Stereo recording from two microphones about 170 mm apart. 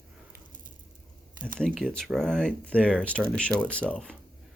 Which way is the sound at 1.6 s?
5° left (ahead or behind).